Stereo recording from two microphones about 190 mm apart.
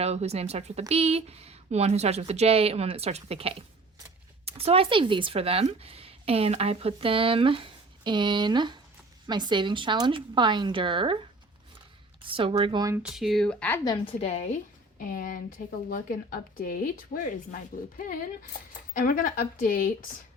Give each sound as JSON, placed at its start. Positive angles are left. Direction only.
{"t": 0.0, "sound": "speech", "side_deg": -35}
{"t": 12.2, "sound": "speech", "side_deg": -30}
{"t": 13.0, "sound": "speech", "side_deg": 0}
{"t": 13.9, "sound": "a woman's voice", "side_deg": 30}